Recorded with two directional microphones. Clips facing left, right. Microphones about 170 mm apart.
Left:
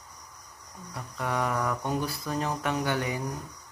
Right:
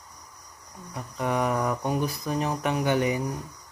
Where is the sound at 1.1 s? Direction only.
20° right (ahead or behind).